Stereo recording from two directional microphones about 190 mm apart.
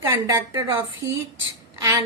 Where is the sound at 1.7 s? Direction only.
15° right (ahead or behind).